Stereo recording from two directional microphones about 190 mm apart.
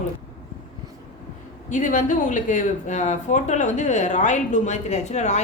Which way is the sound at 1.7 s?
40° left (ahead or behind).